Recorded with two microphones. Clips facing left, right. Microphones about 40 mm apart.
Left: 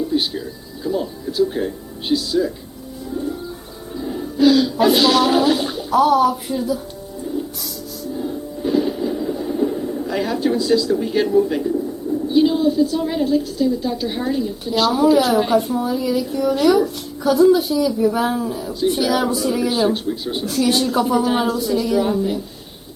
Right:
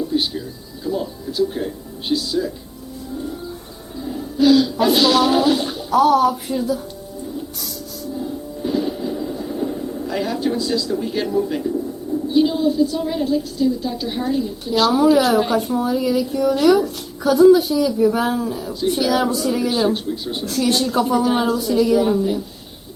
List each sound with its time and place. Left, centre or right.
0.1 s a sound: centre
0.9 s a woman's voice: centre
4.4 s speech: centre
8.2 s music: centre
12.3 s a woman's voice: centre